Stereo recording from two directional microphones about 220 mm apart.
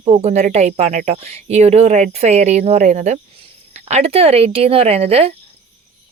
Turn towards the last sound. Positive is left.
turn(degrees=-25)  # may be behind; listen again after turning